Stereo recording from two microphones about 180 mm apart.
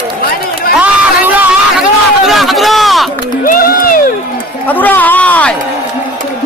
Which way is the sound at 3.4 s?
55° left (ahead or behind).